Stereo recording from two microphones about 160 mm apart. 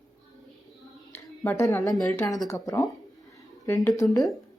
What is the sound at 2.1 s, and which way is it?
Speech, 20° left (ahead or behind).